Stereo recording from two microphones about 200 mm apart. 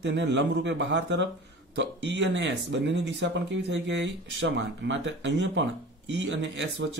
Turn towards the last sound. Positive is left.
turn(degrees=-65)  # may be behind; listen again after turning